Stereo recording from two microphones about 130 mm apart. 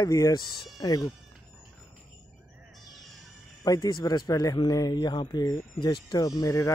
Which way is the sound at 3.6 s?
30° left (ahead or behind).